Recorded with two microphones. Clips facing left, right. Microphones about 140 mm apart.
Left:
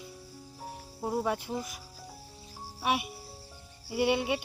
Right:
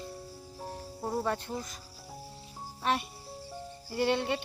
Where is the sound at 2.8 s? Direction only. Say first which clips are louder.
Left 1 dB; 10° left (ahead or behind).